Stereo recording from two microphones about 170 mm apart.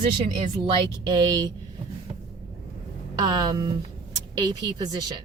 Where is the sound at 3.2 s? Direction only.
25° right (ahead or behind).